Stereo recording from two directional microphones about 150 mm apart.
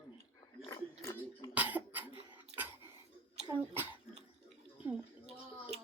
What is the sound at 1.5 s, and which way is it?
Cough, 10° right (ahead or behind).